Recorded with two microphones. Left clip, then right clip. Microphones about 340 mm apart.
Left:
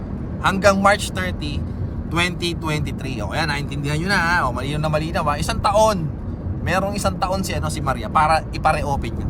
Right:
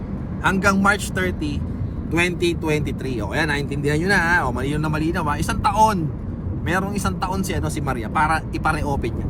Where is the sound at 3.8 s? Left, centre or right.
Left.